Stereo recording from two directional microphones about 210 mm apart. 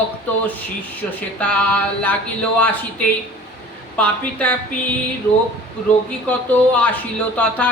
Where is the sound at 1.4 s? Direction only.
5° left (ahead or behind).